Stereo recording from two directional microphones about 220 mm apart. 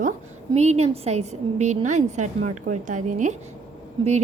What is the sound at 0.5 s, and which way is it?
A woman's voice, 30° right (ahead or behind).